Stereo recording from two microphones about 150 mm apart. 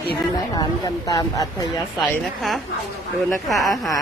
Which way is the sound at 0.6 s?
25° left (ahead or behind).